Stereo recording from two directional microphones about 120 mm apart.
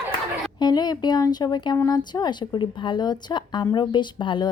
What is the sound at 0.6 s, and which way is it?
A woman's voice, 35° left (ahead or behind).